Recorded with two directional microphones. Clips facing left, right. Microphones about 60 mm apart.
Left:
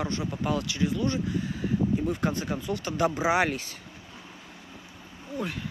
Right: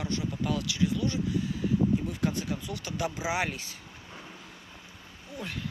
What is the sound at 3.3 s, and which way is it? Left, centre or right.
Speech, left.